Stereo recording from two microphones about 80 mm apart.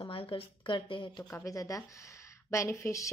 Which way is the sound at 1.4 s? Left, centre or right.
Left.